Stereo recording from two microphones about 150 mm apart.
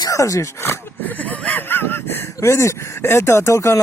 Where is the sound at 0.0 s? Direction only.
20° left (ahead or behind).